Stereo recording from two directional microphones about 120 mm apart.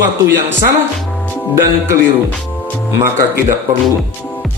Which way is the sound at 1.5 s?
20° right (ahead or behind).